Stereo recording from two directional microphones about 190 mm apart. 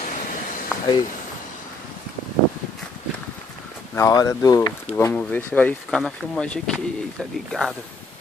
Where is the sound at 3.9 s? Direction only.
20° left (ahead or behind); by 7.7 s centre (ahead or behind).